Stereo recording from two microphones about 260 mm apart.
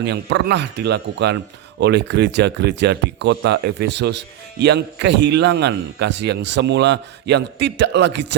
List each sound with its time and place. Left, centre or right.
0.0 s a man's voice: right